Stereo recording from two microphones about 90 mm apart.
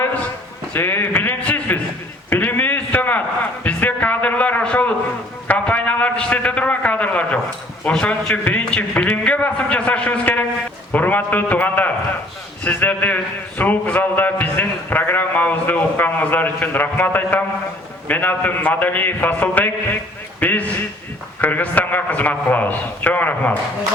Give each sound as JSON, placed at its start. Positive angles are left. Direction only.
{"t": 0.7, "sound": "a man's voice", "side_deg": 25}
{"t": 1.4, "sound": "a sound", "side_deg": 15}
{"t": 5.5, "sound": "a man's voice", "side_deg": 15}